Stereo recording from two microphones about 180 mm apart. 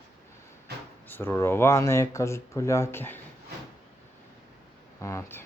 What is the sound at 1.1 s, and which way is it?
Speech, 10° left (ahead or behind).